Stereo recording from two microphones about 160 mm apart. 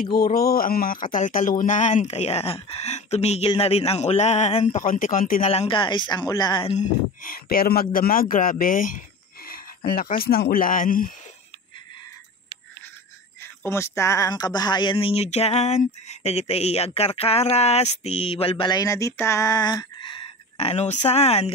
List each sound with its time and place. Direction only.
0.0 s speech: 70° left (ahead or behind); by 4.8 s 45° left (ahead or behind)
4.8 s speech: 60° left (ahead or behind)
5.4 s speech: 40° left (ahead or behind)
6.8 s speech: 65° left (ahead or behind)
13.7 s speech: 15° left (ahead or behind); by 21.5 s 40° left (ahead or behind)